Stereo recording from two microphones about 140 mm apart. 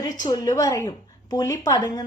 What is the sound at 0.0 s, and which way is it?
A woman's voice, 25° left (ahead or behind).